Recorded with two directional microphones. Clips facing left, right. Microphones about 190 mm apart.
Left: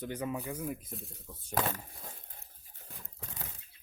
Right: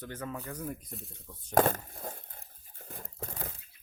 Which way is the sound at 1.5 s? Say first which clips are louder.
Right 8 dB; 50° right (ahead or behind).